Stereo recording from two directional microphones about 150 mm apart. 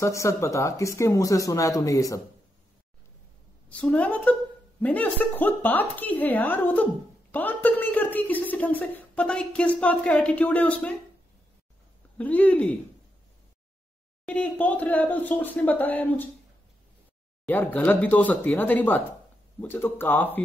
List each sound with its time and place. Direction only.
0.0 s speech: 20° left (ahead or behind)
3.6 s a woman's voice: 10° left (ahead or behind)
12.2 s a woman's voice: 10° left (ahead or behind)
14.2 s a woman's voice: 10° left (ahead or behind)
17.5 s a woman's voice: 10° left (ahead or behind)